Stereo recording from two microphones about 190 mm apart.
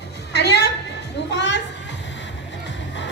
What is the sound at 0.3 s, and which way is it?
Music, 60° left (ahead or behind).